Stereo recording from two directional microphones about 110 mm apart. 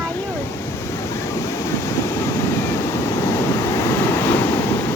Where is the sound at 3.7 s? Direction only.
20° left (ahead or behind).